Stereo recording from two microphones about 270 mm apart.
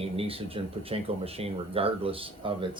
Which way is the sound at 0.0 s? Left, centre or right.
Right.